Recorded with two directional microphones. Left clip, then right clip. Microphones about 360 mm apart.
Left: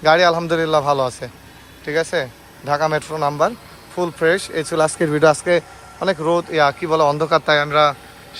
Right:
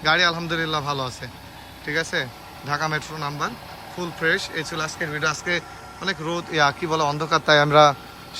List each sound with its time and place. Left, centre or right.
0.0 s speech: centre